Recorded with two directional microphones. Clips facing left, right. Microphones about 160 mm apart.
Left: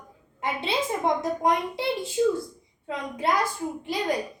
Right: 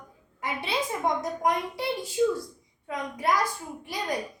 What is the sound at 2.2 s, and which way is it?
Speech, 35° left (ahead or behind).